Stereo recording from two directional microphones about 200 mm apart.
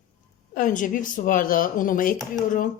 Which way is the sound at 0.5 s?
40° left (ahead or behind).